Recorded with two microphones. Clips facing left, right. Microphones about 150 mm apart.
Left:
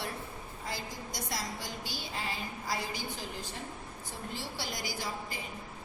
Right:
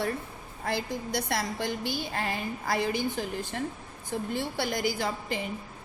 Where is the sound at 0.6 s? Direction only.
65° right (ahead or behind).